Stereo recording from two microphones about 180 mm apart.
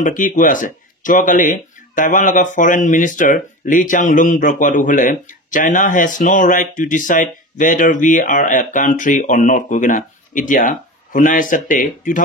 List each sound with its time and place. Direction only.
0.0 s speech: 45° left (ahead or behind)